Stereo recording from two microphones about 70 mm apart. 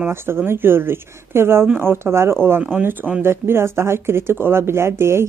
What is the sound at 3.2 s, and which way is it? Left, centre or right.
A woman's voice, right.